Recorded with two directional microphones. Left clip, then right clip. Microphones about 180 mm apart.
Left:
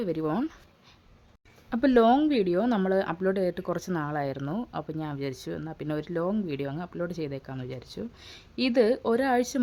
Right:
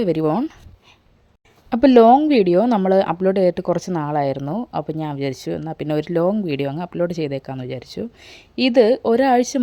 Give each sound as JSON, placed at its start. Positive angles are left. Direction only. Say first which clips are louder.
{"t": 0.0, "sound": "speech", "louder": "right 11 dB", "side_deg": -35}
{"t": 0.3, "sound": "speech", "louder": "right 9 dB", "side_deg": -20}
{"t": 1.7, "sound": "speech", "louder": "right 10 dB", "side_deg": -30}